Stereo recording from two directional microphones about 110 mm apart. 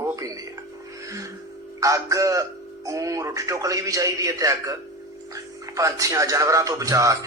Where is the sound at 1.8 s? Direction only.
30° right (ahead or behind).